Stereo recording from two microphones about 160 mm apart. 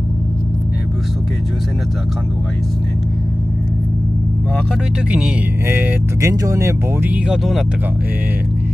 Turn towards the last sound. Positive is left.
turn(degrees=0)  # may be behind; listen again after turning